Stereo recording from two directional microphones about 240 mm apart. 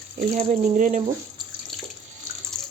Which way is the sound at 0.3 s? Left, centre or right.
Right.